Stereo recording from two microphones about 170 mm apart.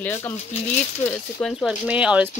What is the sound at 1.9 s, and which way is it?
Speech, 5° right (ahead or behind).